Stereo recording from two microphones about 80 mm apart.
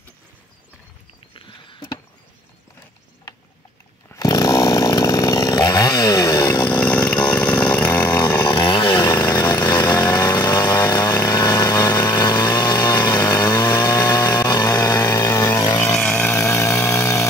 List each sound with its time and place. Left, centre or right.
1.3 s a sound: left
4.1 s chainsaw: left
6.8 s chainsaw: centre
7.9 s chainsaw: left
8.5 s chainsaw: left
9.0 s chainsaw: left
10.9 s vehicle: left
13.9 s chainsaw: left
16.0 s a sound: centre
16.3 s chainsaw: left